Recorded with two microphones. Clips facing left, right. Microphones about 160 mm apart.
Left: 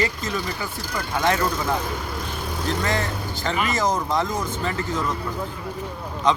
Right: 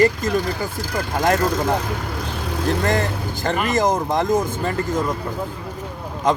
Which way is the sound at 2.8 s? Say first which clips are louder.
Right 4 dB; 50° right (ahead or behind).